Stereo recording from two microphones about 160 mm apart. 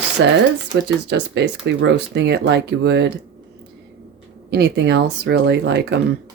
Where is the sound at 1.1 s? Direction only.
90° right.